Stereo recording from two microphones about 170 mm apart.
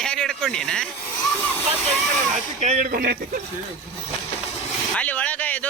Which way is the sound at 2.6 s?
50° right (ahead or behind).